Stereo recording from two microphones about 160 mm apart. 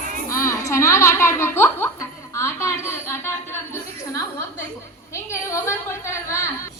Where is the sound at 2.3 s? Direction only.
15° left (ahead or behind).